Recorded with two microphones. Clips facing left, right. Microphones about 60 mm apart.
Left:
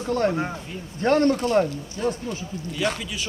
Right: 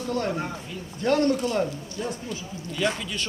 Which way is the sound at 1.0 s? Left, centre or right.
Left.